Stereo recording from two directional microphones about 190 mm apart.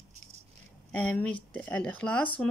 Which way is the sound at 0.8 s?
5° left (ahead or behind).